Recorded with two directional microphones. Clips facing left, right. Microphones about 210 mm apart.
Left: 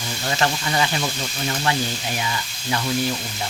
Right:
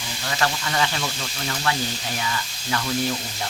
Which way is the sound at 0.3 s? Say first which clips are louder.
Left 2 dB; 25° left (ahead or behind).